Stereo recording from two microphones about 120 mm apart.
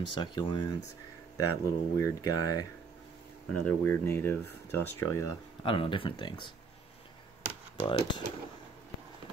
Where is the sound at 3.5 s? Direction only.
10° left (ahead or behind).